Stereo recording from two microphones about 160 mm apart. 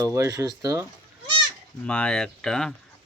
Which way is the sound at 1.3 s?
30° right (ahead or behind).